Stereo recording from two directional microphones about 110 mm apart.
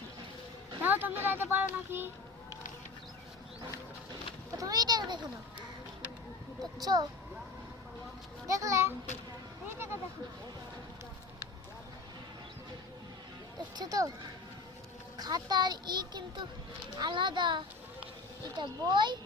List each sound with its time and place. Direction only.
0.8 s speech: 15° right (ahead or behind)
4.5 s a child's voice: 35° right (ahead or behind)
6.8 s speech: 35° right (ahead or behind)
8.4 s speech: 30° right (ahead or behind)
13.7 s speech: 35° right (ahead or behind)
15.2 s a child's voice: 40° right (ahead or behind)